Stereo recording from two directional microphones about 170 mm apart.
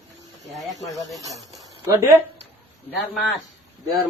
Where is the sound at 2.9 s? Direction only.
Centre (ahead or behind).